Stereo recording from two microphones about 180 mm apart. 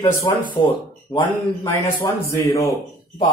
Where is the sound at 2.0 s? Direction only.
15° left (ahead or behind).